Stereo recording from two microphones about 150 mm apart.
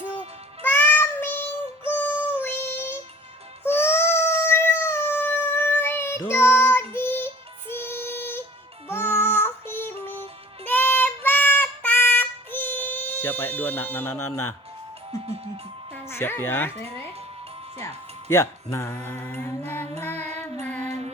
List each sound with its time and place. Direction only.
0.6 s child singing: 10° left (ahead or behind)
3.6 s a sound: 15° left (ahead or behind)
8.9 s music: 15° left (ahead or behind)
10.7 s female singing: 15° left (ahead or behind)
16.0 s mantra: 15° left (ahead or behind)
17.8 s speech: 20° left (ahead or behind)
18.9 s mantra: 10° left (ahead or behind)
20.0 s child singing: 15° left (ahead or behind)
20.4 s music: 10° left (ahead or behind)
20.8 s music: 50° right (ahead or behind)